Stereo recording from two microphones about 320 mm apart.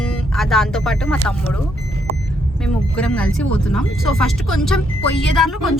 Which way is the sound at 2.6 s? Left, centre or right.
Centre.